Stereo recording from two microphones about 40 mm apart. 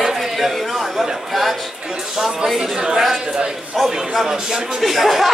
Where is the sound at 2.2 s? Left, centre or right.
Centre.